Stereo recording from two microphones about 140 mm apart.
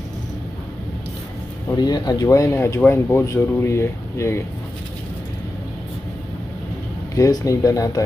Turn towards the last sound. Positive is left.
turn(degrees=25)  # may be behind; listen again after turning